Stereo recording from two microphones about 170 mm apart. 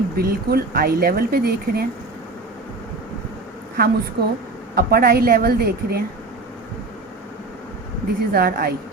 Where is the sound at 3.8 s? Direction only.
60° right (ahead or behind).